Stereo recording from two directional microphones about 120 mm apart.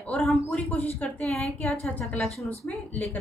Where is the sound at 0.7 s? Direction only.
10° left (ahead or behind).